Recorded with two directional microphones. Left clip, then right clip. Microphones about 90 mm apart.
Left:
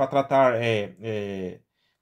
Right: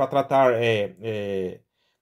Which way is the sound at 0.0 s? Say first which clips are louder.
Right 1 dB; 20° right (ahead or behind).